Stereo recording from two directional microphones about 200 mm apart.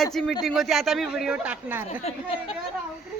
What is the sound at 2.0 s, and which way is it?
Speech, 30° left (ahead or behind).